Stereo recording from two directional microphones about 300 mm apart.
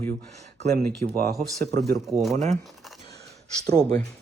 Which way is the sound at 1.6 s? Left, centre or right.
Right.